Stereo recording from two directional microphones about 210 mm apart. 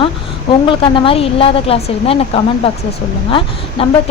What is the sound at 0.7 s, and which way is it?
A woman's voice, 25° left (ahead or behind).